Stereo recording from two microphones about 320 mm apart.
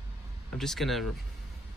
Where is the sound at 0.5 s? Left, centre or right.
Centre.